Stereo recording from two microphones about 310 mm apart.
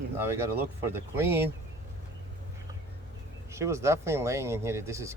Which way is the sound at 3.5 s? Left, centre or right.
Centre.